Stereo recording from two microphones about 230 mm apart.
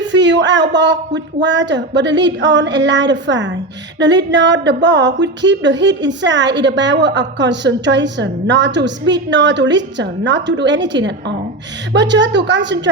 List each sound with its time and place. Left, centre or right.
0.0 s a woman's voice: right